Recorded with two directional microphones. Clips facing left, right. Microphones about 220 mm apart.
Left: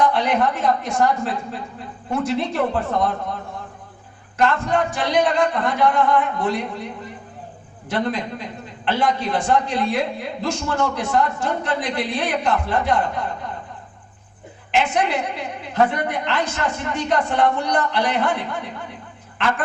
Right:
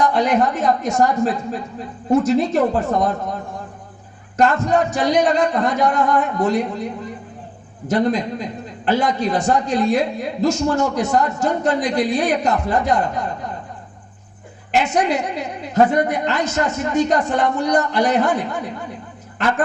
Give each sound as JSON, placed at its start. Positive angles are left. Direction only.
{"t": 0.0, "sound": "a man's voice", "side_deg": -45}
{"t": 4.4, "sound": "a man's voice", "side_deg": -45}
{"t": 7.9, "sound": "a man's voice", "side_deg": -45}
{"t": 14.7, "sound": "a man's voice", "side_deg": -40}